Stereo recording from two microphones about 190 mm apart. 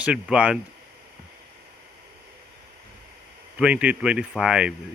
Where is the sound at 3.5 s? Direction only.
5° right (ahead or behind).